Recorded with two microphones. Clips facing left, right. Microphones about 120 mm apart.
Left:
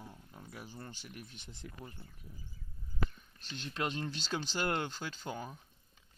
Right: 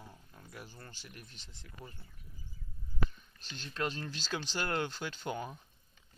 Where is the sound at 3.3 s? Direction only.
60° left (ahead or behind).